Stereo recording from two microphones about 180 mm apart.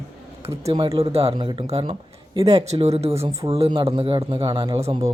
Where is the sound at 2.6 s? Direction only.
35° right (ahead or behind).